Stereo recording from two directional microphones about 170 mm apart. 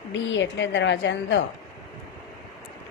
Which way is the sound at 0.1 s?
90° left.